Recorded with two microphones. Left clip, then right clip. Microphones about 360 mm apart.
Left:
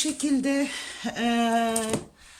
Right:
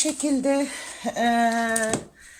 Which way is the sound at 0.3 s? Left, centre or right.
Centre.